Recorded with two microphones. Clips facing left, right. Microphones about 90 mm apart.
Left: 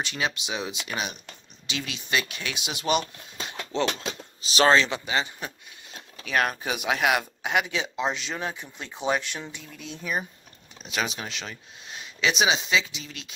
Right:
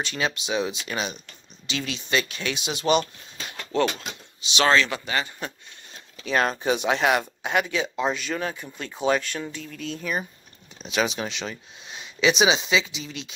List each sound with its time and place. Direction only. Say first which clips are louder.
0.0 s speech: right 2 dB; 15° left (ahead or behind)
4.4 s speech: left 1 dB; 40° left (ahead or behind)
4.7 s speech: even; 25° left (ahead or behind)
6.2 s speech: right 3 dB; 5° left (ahead or behind)
8.4 s speech: right 3 dB; 5° left (ahead or behind)